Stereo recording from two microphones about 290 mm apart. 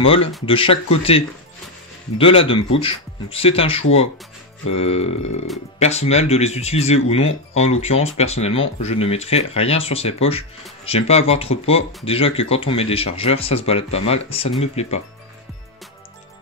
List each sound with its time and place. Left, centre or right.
0.5 s speech: centre